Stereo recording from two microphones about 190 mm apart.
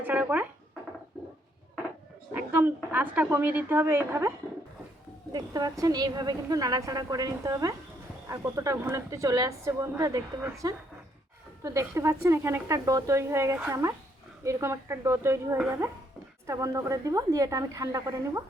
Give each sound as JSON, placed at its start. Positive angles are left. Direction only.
{"t": 0.0, "sound": "speech", "side_deg": -10}
{"t": 2.3, "sound": "a woman's voice", "side_deg": -10}